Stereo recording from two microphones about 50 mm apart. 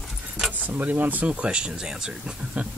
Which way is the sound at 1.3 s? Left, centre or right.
Right.